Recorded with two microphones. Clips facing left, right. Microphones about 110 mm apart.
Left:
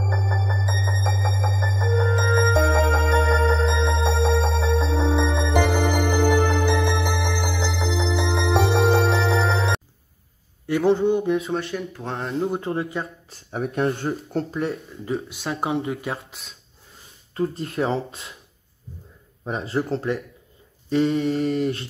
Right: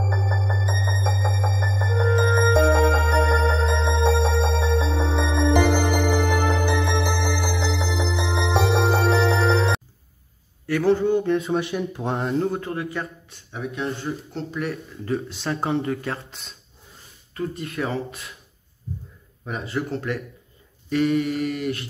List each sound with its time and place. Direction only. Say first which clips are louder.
0.1 s music: even; centre (ahead or behind)
10.7 s speech: even; 20° left (ahead or behind)
11.2 s speech: right 1 dB; centre (ahead or behind)
11.7 s speech: right 3 dB; 25° right (ahead or behind)
12.2 s speech: right 1 dB; centre (ahead or behind)
12.4 s speech: left 1 dB; 20° left (ahead or behind)
13.6 s speech: left 5 dB; 60° left (ahead or behind)
14.5 s speech: right 2 dB; 30° left (ahead or behind)
15.1 s speech: right 1 dB; 10° left (ahead or behind)
17.3 s speech: left 3 dB; 30° left (ahead or behind)
19.4 s speech: left 3 dB; 30° left (ahead or behind)